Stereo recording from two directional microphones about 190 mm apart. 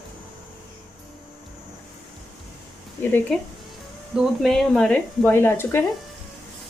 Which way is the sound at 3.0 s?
10° left (ahead or behind).